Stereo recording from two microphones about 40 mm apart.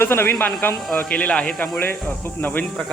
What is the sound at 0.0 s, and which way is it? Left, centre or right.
Speech, left.